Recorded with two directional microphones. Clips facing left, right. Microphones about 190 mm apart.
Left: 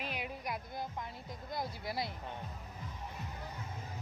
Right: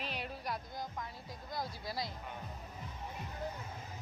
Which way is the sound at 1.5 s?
20° left (ahead or behind).